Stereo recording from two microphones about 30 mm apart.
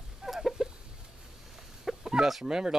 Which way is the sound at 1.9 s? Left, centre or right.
Centre.